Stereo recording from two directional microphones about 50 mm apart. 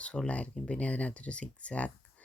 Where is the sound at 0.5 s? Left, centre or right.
Centre.